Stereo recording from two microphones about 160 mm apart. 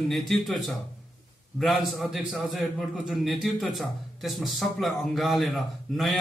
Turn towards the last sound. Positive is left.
turn(degrees=0)  # may be behind; listen again after turning